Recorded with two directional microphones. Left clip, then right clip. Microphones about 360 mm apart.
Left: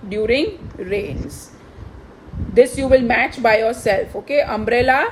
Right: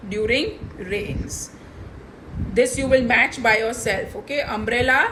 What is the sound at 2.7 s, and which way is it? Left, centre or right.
A woman's voice, left.